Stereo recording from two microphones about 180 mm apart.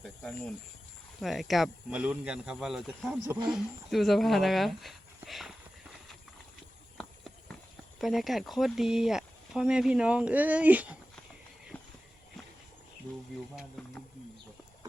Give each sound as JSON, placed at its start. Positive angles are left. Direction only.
{"t": 0.0, "sound": "cricket", "side_deg": 0}
{"t": 1.2, "sound": "speech", "side_deg": 0}
{"t": 3.2, "sound": "speech", "side_deg": -20}
{"t": 3.5, "sound": "speech", "side_deg": 0}
{"t": 6.9, "sound": "clip-clop", "side_deg": 5}
{"t": 7.9, "sound": "speech", "side_deg": 0}
{"t": 11.7, "sound": "walk", "side_deg": 10}
{"t": 13.8, "sound": "wild animals", "side_deg": 0}